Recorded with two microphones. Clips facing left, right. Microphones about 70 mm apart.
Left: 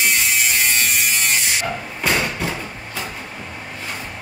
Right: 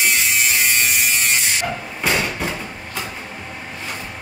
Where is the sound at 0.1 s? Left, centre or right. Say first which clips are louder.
Even; centre.